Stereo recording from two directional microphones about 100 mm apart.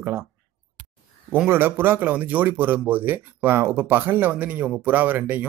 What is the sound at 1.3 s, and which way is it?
Speech, 20° right (ahead or behind).